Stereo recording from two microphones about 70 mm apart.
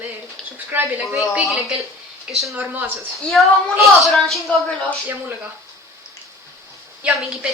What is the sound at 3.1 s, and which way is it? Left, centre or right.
Speech, centre.